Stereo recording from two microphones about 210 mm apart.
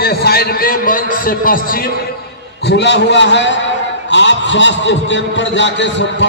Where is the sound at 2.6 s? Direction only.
55° left (ahead or behind).